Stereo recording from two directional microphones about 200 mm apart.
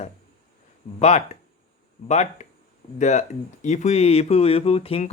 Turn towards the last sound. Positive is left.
turn(degrees=30)  # may be behind; listen again after turning